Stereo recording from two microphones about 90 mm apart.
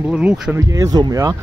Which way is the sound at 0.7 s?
40° right (ahead or behind).